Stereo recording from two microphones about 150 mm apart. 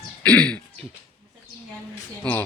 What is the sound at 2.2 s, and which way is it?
Speech, 10° left (ahead or behind).